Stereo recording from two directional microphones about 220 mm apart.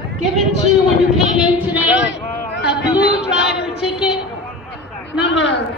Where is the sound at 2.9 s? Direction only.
5° right (ahead or behind).